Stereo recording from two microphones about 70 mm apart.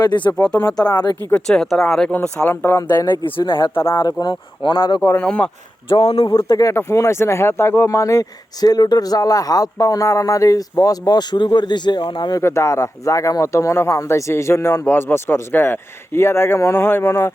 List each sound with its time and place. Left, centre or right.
0.0 s speech: left
0.3 s speech: centre
0.8 s speech: left
1.5 s speech: centre
2.1 s speech: centre
2.5 s speech: left
3.1 s speech: left
3.8 s speech: left
4.0 s speech: left
4.9 s speech: left
5.2 s speech: centre
6.3 s speech: left
12.4 s speech: left